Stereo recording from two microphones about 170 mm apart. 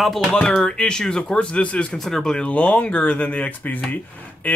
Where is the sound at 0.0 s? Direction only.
Centre (ahead or behind).